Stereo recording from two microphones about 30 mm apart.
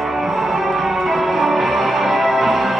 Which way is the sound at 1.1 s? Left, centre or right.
Centre.